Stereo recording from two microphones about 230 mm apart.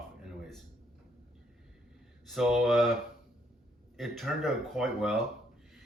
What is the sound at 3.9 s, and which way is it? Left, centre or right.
Speech, centre.